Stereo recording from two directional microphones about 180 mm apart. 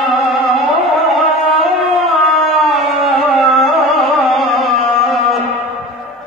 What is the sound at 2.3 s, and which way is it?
Music, centre (ahead or behind).